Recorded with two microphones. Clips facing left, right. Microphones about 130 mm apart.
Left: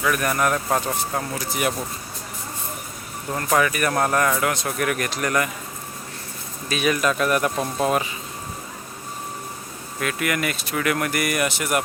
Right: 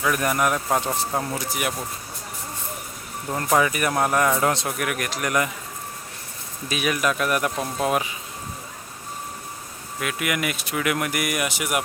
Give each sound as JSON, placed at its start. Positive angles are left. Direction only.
{"t": 0.0, "sound": "speech", "side_deg": -20}
{"t": 3.3, "sound": "speech", "side_deg": -20}
{"t": 4.8, "sound": "speech", "side_deg": -5}
{"t": 6.7, "sound": "speech", "side_deg": -10}
{"t": 10.0, "sound": "speech", "side_deg": -10}